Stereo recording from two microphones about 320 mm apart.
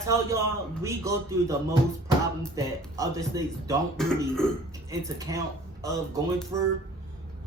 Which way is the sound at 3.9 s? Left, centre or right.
Centre.